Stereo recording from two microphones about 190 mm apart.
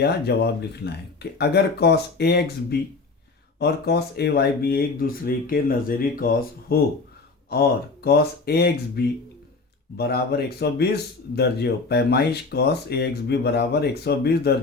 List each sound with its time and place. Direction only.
0.0 s speech: 60° left (ahead or behind)